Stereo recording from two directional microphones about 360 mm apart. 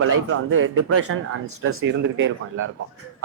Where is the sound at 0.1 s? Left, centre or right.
Right.